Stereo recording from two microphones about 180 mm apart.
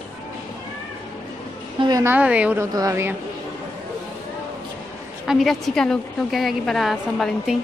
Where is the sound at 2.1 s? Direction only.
5° right (ahead or behind).